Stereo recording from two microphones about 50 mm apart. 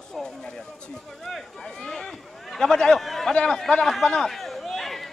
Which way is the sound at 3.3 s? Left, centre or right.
Centre.